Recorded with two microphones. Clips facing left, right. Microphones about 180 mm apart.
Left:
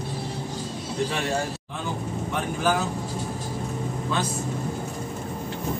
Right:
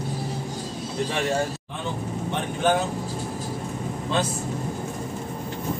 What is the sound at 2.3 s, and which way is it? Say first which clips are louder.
Speech: right 2 dB; 25° right (ahead or behind).